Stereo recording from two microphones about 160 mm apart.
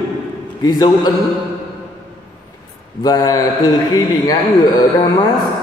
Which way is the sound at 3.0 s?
25° left (ahead or behind).